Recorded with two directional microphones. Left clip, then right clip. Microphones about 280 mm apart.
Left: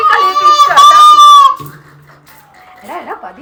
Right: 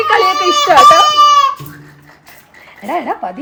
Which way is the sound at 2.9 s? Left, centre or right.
Right.